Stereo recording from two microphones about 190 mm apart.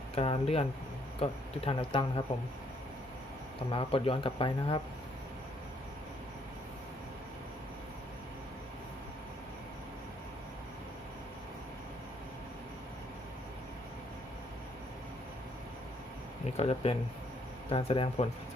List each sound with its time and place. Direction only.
0.2 s speech: 30° left (ahead or behind)
3.7 s speech: 30° left (ahead or behind)
16.6 s speech: 30° left (ahead or behind)